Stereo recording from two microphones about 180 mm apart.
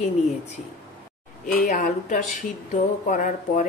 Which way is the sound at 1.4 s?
45° left (ahead or behind).